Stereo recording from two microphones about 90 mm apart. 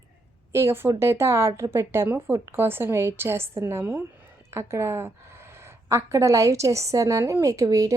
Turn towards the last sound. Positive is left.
turn(degrees=-40)  # may be behind; listen again after turning